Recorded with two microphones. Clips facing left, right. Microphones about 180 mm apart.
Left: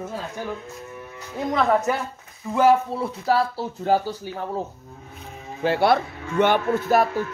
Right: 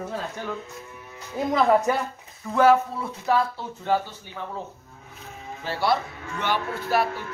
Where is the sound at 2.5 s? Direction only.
10° left (ahead or behind).